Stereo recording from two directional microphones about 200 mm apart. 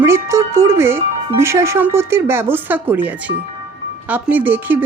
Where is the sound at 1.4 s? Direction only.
15° right (ahead or behind).